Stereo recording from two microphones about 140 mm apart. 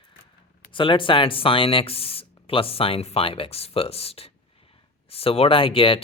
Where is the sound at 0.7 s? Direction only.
35° left (ahead or behind).